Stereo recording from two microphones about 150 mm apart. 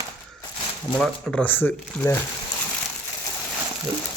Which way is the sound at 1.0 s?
5° left (ahead or behind).